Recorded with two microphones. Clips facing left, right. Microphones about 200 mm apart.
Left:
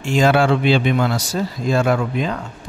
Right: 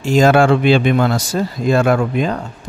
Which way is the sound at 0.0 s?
40° right (ahead or behind).